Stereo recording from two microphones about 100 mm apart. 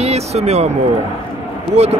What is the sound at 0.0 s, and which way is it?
Speech, 90° right.